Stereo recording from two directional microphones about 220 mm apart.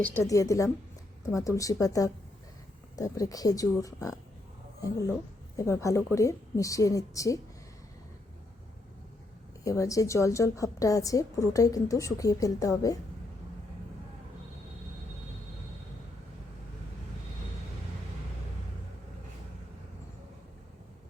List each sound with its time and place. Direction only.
0.3 s a woman's voice: 15° left (ahead or behind)
9.6 s a woman's voice: 15° left (ahead or behind)